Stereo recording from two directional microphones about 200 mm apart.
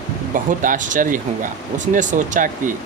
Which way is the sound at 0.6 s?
40° right (ahead or behind).